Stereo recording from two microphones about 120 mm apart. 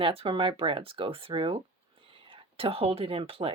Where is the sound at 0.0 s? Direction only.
50° right (ahead or behind).